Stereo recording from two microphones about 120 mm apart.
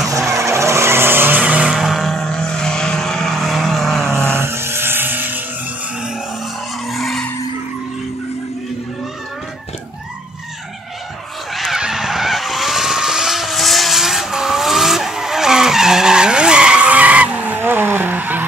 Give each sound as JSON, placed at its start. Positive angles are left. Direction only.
{"t": 0.0, "sound": "vehicle", "side_deg": -25}
{"t": 4.2, "sound": "vehicle", "side_deg": -20}
{"t": 6.9, "sound": "skidding", "side_deg": 0}
{"t": 11.5, "sound": "vehicle", "side_deg": -5}